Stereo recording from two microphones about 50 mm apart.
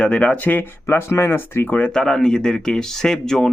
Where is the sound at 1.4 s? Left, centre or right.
Left.